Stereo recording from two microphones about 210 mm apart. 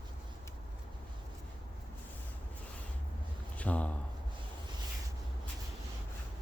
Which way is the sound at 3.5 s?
5° left (ahead or behind).